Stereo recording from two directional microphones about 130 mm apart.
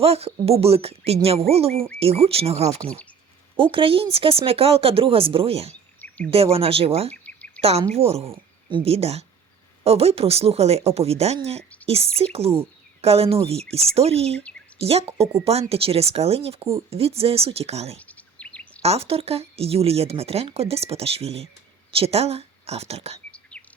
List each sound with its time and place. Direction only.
0.0 s speech: 50° right (ahead or behind)
6.0 s a sound: 10° left (ahead or behind)
6.3 s speech: 50° right (ahead or behind)
7.1 s chirp: 10° left (ahead or behind)
7.6 s speech: 50° right (ahead or behind)
17.9 s a sound: 10° left (ahead or behind)
18.8 s a woman's voice: 50° right (ahead or behind)
23.3 s whispering: 10° left (ahead or behind)